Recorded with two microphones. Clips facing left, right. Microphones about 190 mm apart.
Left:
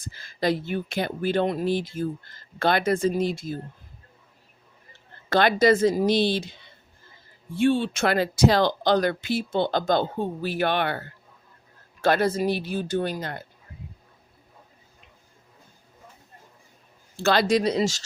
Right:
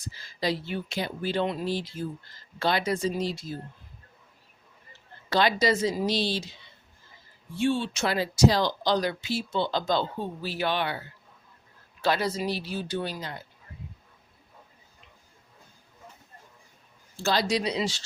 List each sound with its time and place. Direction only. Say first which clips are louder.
0.0 s speech: left 4 dB; 55° left (ahead or behind)
5.3 s speech: left 5 dB; 55° left (ahead or behind)
17.2 s speech: left 5 dB; 55° left (ahead or behind)